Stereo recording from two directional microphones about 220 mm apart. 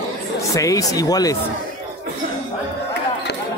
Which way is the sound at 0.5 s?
15° left (ahead or behind).